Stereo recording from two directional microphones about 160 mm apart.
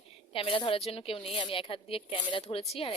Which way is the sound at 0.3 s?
35° left (ahead or behind).